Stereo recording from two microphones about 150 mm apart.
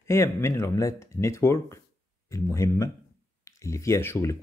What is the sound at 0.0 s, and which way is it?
Speech, 20° left (ahead or behind).